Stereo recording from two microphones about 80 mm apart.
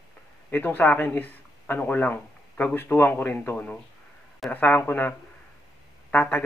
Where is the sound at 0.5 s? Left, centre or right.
Left.